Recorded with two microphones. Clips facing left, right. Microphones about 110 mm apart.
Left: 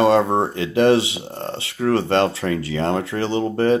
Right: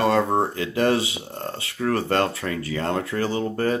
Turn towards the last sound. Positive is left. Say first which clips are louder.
# left 5 dB
turn(degrees=25)  # may be behind; listen again after turning